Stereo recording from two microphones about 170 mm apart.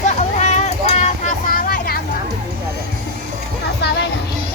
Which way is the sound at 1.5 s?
60° left (ahead or behind).